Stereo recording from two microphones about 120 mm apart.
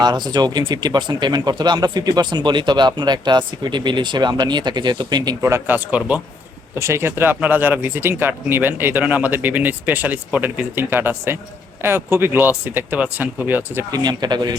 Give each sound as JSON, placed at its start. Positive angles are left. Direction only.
{"t": 0.0, "sound": "speech", "side_deg": -35}
{"t": 6.7, "sound": "speech", "side_deg": -20}
{"t": 13.9, "sound": "speech", "side_deg": -35}